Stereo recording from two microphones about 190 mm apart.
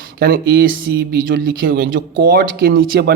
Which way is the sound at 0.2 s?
55° right (ahead or behind).